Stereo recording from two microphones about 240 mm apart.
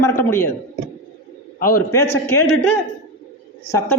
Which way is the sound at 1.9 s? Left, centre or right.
Centre.